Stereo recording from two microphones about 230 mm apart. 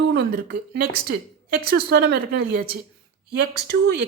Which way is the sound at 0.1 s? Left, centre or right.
Right.